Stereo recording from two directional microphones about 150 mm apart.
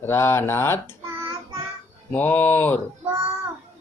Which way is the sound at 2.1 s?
10° left (ahead or behind).